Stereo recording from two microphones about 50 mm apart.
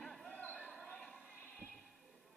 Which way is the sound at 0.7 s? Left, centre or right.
Centre.